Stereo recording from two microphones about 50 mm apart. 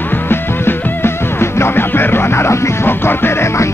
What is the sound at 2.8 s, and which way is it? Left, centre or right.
Music, left.